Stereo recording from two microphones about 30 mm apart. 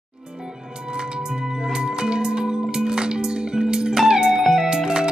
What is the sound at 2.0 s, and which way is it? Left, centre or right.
Music, right.